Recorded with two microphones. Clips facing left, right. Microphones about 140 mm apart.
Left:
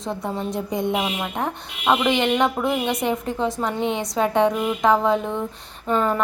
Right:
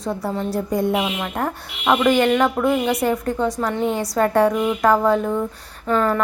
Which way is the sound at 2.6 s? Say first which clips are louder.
Right 4 dB; centre (ahead or behind).